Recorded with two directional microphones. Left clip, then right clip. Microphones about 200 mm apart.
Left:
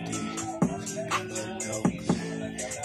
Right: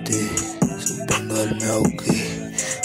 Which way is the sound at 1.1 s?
45° right (ahead or behind).